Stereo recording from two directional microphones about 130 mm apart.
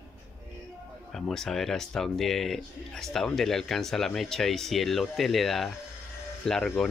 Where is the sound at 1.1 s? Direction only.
5° left (ahead or behind).